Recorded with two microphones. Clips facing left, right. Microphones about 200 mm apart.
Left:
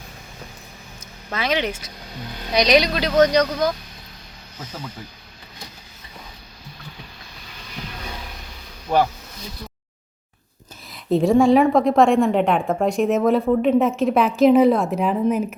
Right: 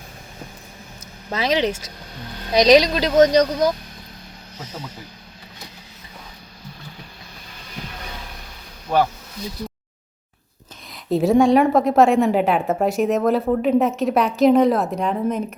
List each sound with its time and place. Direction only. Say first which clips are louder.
1.4 s speech: right 3 dB; 35° right (ahead or behind)
3.2 s speech: right 2 dB; 20° right (ahead or behind)
10.9 s a woman's voice: even; centre (ahead or behind)